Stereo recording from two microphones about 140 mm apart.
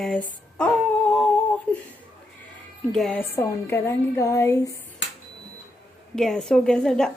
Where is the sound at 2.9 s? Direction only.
5° left (ahead or behind).